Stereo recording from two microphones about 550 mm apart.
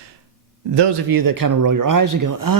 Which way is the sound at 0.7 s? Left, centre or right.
Right.